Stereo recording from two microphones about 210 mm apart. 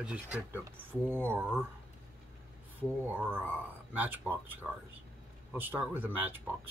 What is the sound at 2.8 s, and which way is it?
Speech, 10° right (ahead or behind).